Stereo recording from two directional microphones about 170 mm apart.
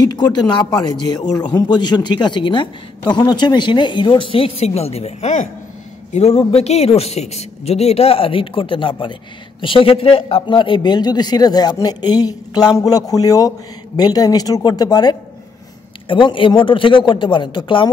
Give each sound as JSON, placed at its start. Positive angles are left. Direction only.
{"t": 0.1, "sound": "a man's voice", "side_deg": 25}